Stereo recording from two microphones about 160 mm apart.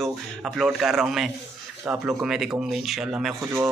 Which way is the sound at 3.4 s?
15° right (ahead or behind).